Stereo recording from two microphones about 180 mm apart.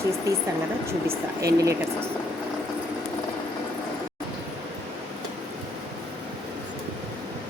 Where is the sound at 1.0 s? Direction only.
20° right (ahead or behind).